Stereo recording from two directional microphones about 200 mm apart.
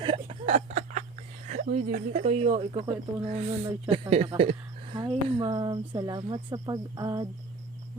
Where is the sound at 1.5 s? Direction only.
35° right (ahead or behind); by 7.3 s 20° right (ahead or behind).